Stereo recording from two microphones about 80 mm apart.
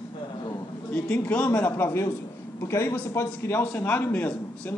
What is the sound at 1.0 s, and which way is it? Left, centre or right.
Speech, centre.